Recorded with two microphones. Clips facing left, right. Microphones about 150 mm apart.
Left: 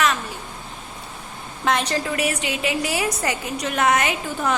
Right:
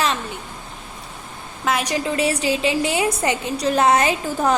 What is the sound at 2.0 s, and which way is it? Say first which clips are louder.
A woman's voice: right 4 dB; 30° right (ahead or behind).